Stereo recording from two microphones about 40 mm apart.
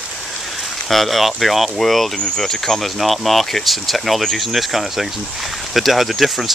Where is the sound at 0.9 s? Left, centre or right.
Centre.